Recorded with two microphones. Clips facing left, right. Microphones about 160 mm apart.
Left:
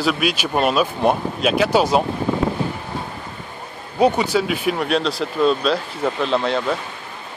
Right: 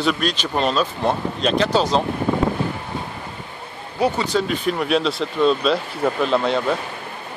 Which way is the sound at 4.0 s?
10° left (ahead or behind).